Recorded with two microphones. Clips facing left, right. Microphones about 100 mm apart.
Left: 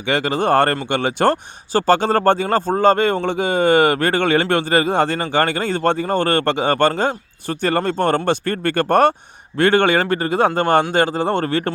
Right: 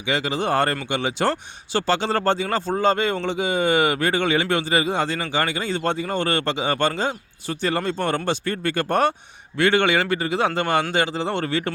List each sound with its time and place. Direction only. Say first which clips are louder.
0.0 s speech: left 5 dB; 55° left (ahead or behind)